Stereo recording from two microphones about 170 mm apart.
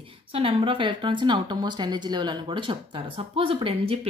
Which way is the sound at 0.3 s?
30° right (ahead or behind).